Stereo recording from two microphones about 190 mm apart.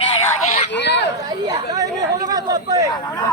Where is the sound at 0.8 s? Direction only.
65° left (ahead or behind).